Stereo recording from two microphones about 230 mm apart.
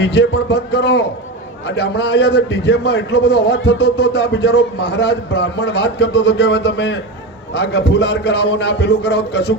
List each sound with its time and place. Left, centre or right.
0.0 s a man's voice: left